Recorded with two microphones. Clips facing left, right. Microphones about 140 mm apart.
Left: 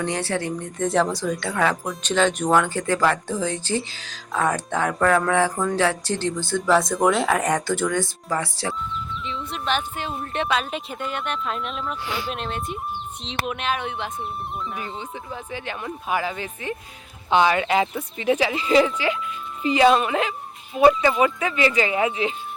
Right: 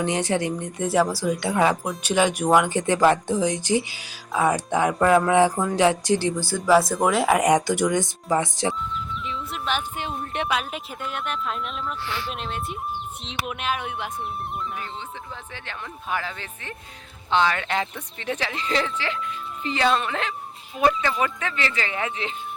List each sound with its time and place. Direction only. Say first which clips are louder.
0.0 s speech: right 2 dB; 15° right (ahead or behind)
0.9 s speech: even; 5° right (ahead or behind)
1.8 s speech: even; 5° right (ahead or behind)
9.2 s music: left 3 dB; 5° right (ahead or behind)
10.3 s speech: left 3 dB; 10° right (ahead or behind)
12.0 s speech: left 2 dB; 15° left (ahead or behind)
12.3 s speech: left 2 dB; centre (ahead or behind)
14.8 s speech: left 2 dB; 10° left (ahead or behind)